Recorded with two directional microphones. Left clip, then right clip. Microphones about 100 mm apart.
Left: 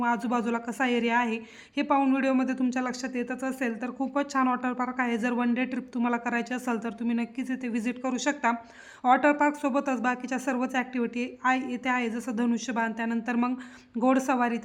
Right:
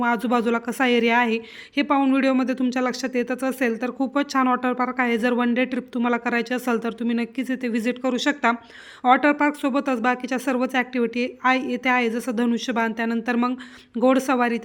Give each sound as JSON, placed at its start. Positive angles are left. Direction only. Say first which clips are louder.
{"t": 0.0, "sound": "speech", "louder": "right 6 dB", "side_deg": -25}